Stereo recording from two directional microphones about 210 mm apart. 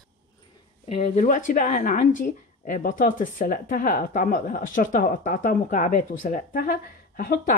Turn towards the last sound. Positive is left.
turn(degrees=40)  # may be behind; listen again after turning